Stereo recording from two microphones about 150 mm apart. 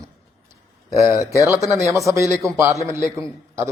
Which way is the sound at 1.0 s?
20° right (ahead or behind).